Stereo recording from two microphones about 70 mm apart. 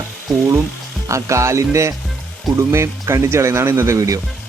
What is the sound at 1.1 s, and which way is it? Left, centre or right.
Speech, right.